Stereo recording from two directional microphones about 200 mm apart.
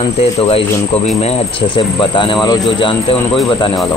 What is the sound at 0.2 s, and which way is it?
Speech, 30° left (ahead or behind).